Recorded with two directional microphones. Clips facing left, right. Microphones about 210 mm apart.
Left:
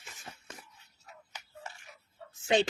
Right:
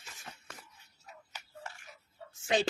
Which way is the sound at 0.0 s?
20° left (ahead or behind).